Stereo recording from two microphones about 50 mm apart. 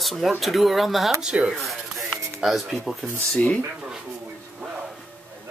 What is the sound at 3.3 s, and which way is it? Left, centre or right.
Speech, left.